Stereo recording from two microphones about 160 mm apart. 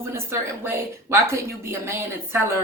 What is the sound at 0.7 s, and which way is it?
Speech, 15° right (ahead or behind).